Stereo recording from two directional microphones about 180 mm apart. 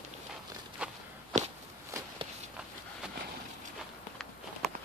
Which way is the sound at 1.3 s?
40° right (ahead or behind).